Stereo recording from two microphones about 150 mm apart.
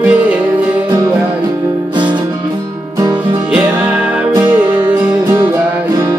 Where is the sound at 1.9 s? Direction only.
30° right (ahead or behind).